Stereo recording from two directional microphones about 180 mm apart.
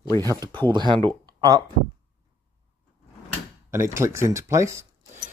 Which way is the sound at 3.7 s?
15° right (ahead or behind).